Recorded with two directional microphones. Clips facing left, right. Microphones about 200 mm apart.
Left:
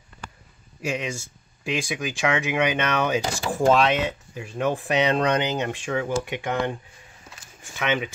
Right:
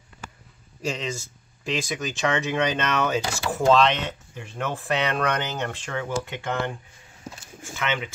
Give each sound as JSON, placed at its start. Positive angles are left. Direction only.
{"t": 0.8, "sound": "speech", "side_deg": 10}